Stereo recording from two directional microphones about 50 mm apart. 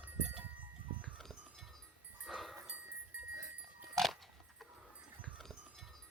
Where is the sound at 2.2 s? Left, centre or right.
Centre.